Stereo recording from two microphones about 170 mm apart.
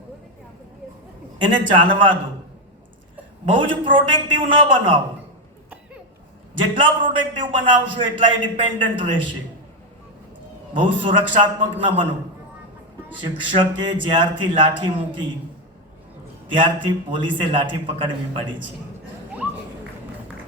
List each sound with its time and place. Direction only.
1.4 s a man's voice: 30° right (ahead or behind)
3.5 s a man's voice: 30° right (ahead or behind)
7.3 s a man's voice: 30° right (ahead or behind)
10.8 s a man's voice: 30° right (ahead or behind)
13.1 s a man's voice: 30° right (ahead or behind)
16.5 s a man's voice: 30° right (ahead or behind)